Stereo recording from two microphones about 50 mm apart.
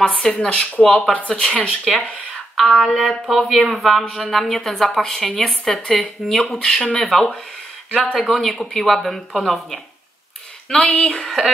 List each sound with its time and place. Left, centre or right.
0.3 s speech: left
0.8 s speech: centre
1.7 s speech: centre
10.7 s speech: centre
11.2 s speech: centre